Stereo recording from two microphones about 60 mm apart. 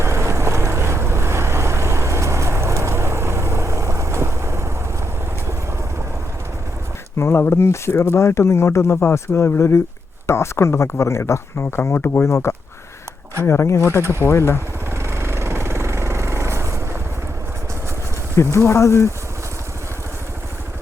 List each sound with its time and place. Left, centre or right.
0.0 s boat: right
7.2 s speech: left
14.9 s vehicle: right
18.3 s speech: left